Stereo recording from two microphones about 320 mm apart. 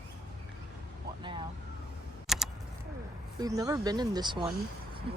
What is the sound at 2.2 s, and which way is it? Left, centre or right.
Computer keyboard, centre.